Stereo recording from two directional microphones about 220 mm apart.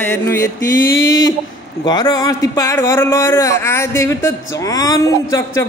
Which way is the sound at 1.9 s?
15° left (ahead or behind).